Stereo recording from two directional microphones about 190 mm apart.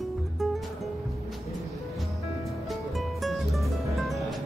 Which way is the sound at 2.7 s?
Centre (ahead or behind).